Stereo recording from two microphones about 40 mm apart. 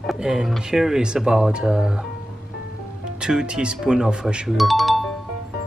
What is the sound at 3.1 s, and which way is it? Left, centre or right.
Speech, right.